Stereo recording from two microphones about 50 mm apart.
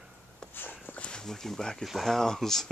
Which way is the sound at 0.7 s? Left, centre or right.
Left.